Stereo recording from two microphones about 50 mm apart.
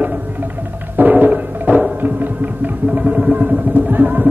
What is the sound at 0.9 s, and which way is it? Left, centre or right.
Music, right.